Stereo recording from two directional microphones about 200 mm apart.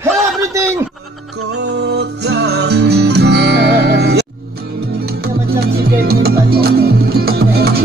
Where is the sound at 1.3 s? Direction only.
75° right (ahead or behind); by 4.6 s 55° right (ahead or behind).